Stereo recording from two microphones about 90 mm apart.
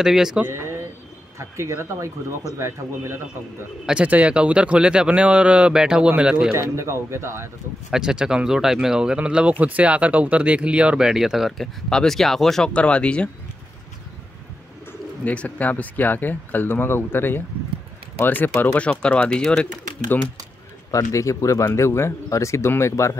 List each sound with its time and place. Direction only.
0.0 s speech: 5° right (ahead or behind)
0.5 s a sound: 30° right (ahead or behind)
1.4 s speech: 30° right (ahead or behind)
3.8 s a man's voice: 15° right (ahead or behind)
6.5 s speech: 30° right (ahead or behind)
7.9 s a man's voice: 10° right (ahead or behind); by 13.3 s 10° left (ahead or behind)
14.9 s speech: 15° left (ahead or behind)
20.9 s speech: 35° left (ahead or behind)